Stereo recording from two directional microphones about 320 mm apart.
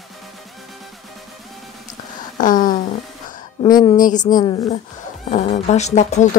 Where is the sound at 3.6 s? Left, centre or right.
Centre.